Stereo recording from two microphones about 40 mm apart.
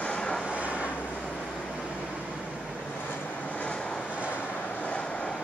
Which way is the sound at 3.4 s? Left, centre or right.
Left.